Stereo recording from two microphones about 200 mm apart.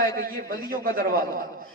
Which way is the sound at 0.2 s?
45° right (ahead or behind).